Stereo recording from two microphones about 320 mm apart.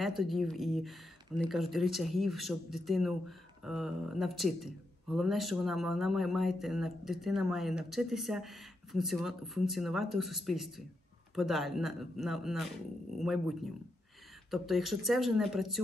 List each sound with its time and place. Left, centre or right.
0.0 s speech: centre